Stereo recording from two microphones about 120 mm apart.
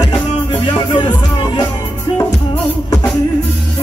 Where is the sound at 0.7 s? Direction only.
40° left (ahead or behind).